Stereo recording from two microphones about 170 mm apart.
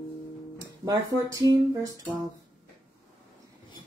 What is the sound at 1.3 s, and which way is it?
Speech, 20° right (ahead or behind).